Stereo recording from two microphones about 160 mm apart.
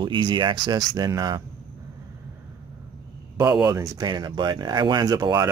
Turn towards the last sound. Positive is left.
turn(degrees=-20)  # may be behind; listen again after turning